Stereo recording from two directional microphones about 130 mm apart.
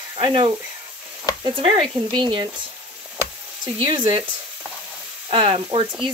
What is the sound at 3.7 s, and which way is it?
Speech, 40° right (ahead or behind).